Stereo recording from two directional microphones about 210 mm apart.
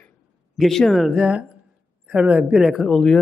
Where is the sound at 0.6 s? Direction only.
Centre (ahead or behind).